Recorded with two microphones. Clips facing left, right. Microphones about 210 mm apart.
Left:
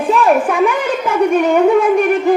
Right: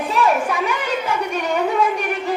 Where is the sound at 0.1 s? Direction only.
55° left (ahead or behind).